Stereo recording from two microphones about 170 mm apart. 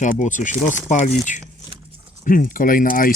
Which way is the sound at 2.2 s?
55° left (ahead or behind).